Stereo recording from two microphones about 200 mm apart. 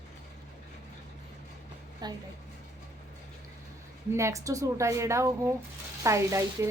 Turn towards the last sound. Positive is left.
turn(degrees=-15)  # may be behind; listen again after turning